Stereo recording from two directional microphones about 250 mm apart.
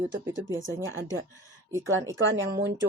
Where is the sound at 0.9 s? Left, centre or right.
Right.